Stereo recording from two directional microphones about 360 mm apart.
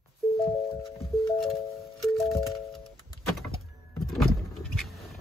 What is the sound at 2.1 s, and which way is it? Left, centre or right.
Music, centre.